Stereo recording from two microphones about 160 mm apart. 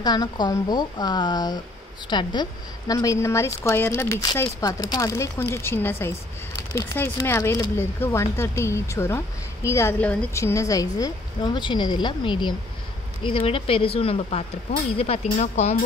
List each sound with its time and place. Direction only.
0.0 s a woman's voice: 25° left (ahead or behind); by 15.8 s 40° left (ahead or behind)